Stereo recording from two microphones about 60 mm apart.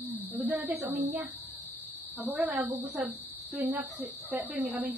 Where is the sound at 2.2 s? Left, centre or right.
Right.